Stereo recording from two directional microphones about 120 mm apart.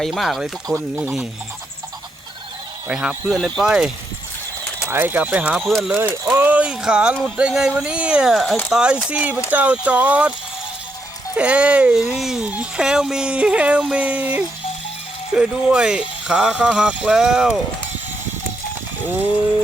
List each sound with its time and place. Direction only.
0.0 s speech: centre (ahead or behind)
2.8 s speech: 5° right (ahead or behind)
4.9 s speech: 15° right (ahead or behind)
5.6 s speech: centre (ahead or behind)
6.0 s speech: 20° right (ahead or behind)
11.3 s speech: 10° right (ahead or behind)